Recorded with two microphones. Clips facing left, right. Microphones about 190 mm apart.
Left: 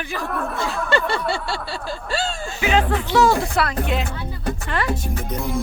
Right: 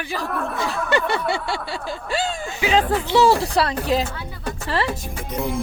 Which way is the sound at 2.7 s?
30° right (ahead or behind).